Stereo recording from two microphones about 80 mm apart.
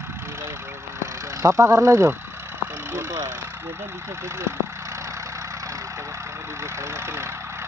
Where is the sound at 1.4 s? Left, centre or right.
Right.